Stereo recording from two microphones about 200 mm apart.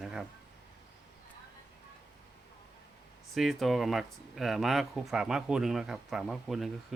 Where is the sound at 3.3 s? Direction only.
Centre (ahead or behind).